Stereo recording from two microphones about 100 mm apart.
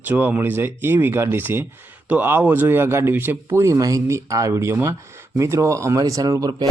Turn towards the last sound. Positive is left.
turn(degrees=-40)  # may be behind; listen again after turning